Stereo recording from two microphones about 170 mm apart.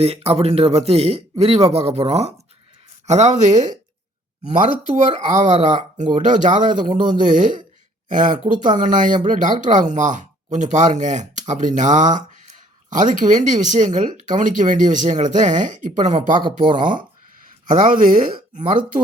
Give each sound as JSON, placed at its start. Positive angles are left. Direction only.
{"t": 0.0, "sound": "speech", "side_deg": -35}
{"t": 5.3, "sound": "speech", "side_deg": -45}
{"t": 16.4, "sound": "speech", "side_deg": -30}
{"t": 17.7, "sound": "speech", "side_deg": -50}